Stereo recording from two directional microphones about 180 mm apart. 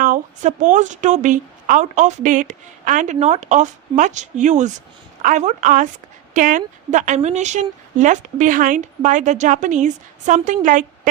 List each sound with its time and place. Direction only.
0.0 s a woman's voice: 45° right (ahead or behind)